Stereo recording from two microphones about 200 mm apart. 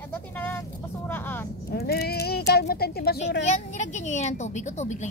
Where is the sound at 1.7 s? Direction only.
50° left (ahead or behind).